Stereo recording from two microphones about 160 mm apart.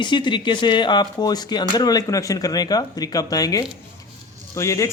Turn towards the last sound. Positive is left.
turn(degrees=20)  # may be behind; listen again after turning